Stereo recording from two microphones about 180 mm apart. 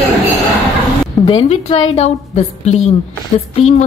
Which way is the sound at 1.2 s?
35° left (ahead or behind).